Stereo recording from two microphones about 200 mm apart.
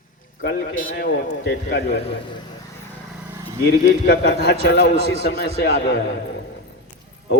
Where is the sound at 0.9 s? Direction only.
55° left (ahead or behind).